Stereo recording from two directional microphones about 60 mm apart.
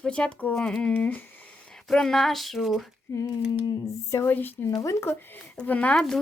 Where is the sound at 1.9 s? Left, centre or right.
Centre.